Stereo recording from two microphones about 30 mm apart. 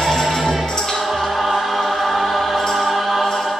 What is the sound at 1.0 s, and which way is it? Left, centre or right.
Choir, centre.